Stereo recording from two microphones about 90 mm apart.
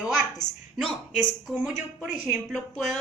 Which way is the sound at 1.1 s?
15° right (ahead or behind).